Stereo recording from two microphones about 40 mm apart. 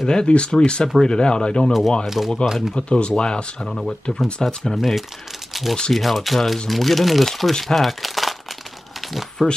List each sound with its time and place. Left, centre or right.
0.0 s speech: left
1.7 s speech: centre
2.7 s speech: left
3.6 s speech: centre
4.7 s speech: centre
5.5 s a sound: centre
5.9 s speech: centre
9.4 s speech: centre